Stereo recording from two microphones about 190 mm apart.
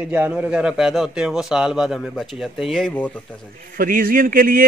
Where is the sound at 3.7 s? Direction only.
45° right (ahead or behind).